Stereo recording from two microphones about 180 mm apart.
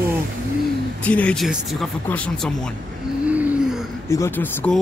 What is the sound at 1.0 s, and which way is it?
Speech, 5° left (ahead or behind).